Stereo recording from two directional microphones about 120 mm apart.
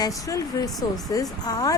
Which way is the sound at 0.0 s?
30° left (ahead or behind).